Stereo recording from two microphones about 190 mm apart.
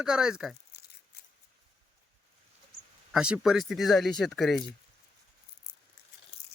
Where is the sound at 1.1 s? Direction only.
55° left (ahead or behind).